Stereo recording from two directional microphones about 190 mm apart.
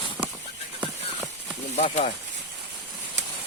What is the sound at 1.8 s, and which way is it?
Speech, 35° left (ahead or behind).